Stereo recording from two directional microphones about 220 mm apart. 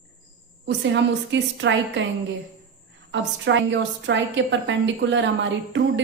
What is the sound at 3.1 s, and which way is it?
A woman's voice, 55° right (ahead or behind).